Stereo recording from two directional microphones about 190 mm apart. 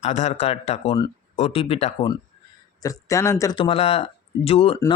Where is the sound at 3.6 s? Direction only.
30° left (ahead or behind).